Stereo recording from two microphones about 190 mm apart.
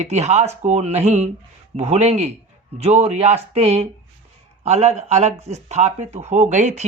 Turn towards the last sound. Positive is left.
turn(degrees=-40)  # may be behind; listen again after turning